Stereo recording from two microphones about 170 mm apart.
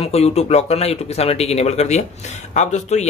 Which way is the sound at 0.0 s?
40° left (ahead or behind).